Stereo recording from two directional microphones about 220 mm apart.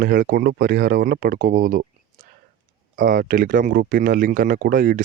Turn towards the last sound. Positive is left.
turn(degrees=-40)  # may be behind; listen again after turning